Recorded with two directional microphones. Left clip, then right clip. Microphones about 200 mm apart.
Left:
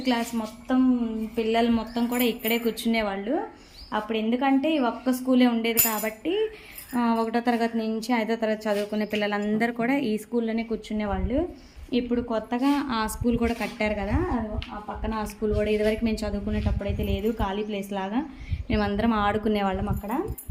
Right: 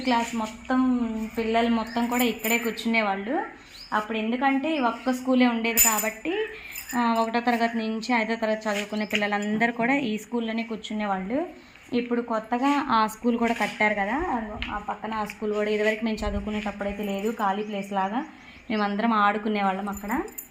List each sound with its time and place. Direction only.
0.0 s a woman's voice: 5° left (ahead or behind)
8.7 s a woman's voice: 5° left (ahead or behind)
11.9 s a woman's voice: 5° left (ahead or behind)